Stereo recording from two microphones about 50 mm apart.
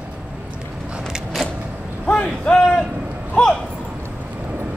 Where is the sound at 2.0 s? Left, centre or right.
Left.